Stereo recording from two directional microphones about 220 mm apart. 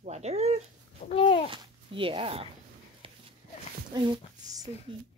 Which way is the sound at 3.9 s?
20° right (ahead or behind).